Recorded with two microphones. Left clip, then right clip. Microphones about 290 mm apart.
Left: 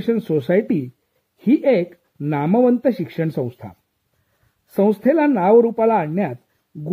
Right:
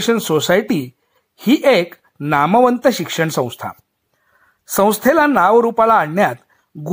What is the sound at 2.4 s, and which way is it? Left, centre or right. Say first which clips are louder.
Speech: right 3 dB; right.